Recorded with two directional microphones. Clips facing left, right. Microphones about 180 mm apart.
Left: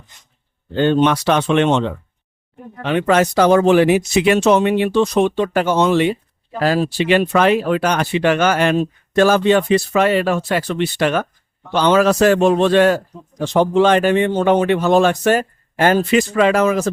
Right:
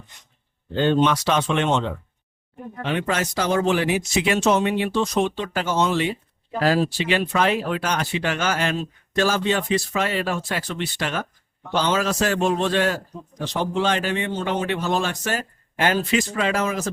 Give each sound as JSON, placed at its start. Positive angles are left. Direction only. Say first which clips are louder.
{"t": 0.8, "sound": "speech", "louder": "left 4 dB", "side_deg": 60}
{"t": 13.4, "sound": "speech", "louder": "left 9 dB", "side_deg": 50}
{"t": 16.3, "sound": "speech", "louder": "left 9 dB", "side_deg": 65}